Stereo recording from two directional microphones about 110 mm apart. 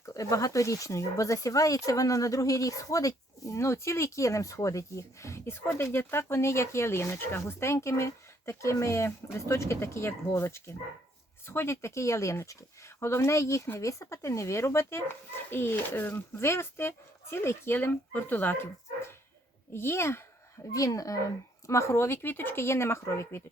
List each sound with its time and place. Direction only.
0.0 s speech: 30° left (ahead or behind)